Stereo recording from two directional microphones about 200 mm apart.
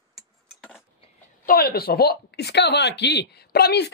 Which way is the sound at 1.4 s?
45° left (ahead or behind).